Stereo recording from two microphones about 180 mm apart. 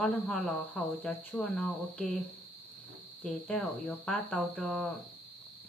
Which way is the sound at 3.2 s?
5° left (ahead or behind).